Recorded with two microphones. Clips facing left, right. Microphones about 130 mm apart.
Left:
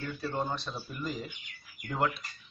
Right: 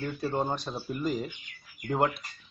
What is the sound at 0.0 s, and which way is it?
Speech, 40° right (ahead or behind).